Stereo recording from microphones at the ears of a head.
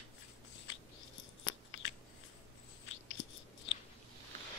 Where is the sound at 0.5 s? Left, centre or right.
Left.